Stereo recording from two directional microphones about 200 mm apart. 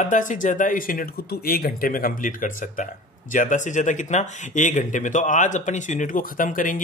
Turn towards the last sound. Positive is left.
turn(degrees=40)  # may be behind; listen again after turning